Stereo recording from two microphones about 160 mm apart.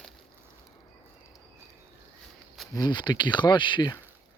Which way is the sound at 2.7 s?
25° left (ahead or behind).